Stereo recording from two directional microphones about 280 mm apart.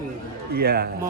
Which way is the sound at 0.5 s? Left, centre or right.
Right.